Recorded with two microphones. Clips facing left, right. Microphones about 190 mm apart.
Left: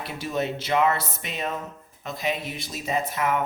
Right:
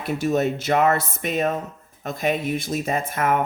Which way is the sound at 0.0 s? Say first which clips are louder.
Right 7 dB; 45° right (ahead or behind).